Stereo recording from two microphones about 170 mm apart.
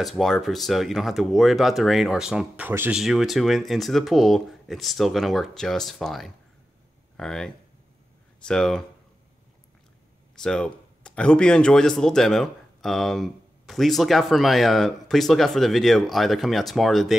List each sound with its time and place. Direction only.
0.0 s speech: centre (ahead or behind)
10.3 s speech: 5° left (ahead or behind)